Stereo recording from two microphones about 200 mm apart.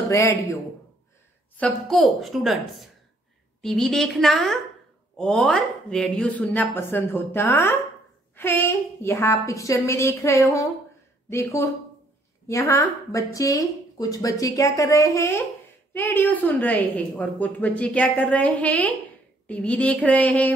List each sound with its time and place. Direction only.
0.1 s a woman's voice: 15° left (ahead or behind)
1.6 s a woman's voice: centre (ahead or behind)